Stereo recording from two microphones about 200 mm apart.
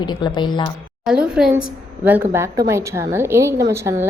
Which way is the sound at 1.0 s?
5° right (ahead or behind).